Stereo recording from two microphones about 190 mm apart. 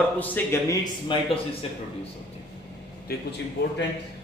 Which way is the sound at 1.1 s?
25° left (ahead or behind).